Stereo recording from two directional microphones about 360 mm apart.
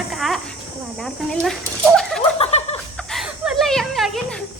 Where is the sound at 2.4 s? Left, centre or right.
Centre.